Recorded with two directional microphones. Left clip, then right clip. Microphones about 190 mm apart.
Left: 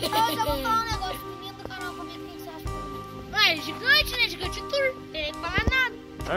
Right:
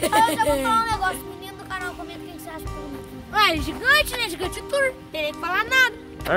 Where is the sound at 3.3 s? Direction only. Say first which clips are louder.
Right 3 dB; 40° right (ahead or behind).